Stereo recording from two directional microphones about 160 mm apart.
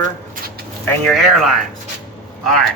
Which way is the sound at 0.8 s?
Centre (ahead or behind).